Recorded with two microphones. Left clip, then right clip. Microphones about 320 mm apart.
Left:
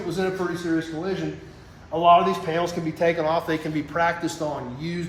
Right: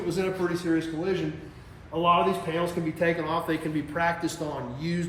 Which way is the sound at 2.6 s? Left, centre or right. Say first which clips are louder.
Left 3 dB; left.